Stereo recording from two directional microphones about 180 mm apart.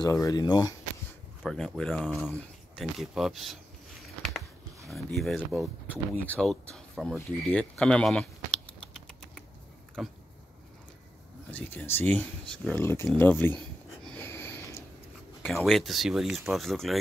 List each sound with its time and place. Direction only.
0.0 s speech: 20° left (ahead or behind)
1.4 s speech: 5° left (ahead or behind)
10.0 s speech: centre (ahead or behind)
11.5 s speech: 10° left (ahead or behind)
14.0 s a sound: 10° left (ahead or behind)
15.4 s speech: centre (ahead or behind)